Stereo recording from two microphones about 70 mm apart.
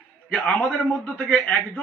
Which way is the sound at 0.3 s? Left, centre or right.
Centre.